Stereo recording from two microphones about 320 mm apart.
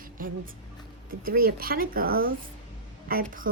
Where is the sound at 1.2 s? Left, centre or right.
Right.